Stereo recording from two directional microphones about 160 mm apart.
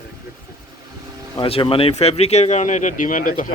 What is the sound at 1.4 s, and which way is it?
Speech, 35° left (ahead or behind).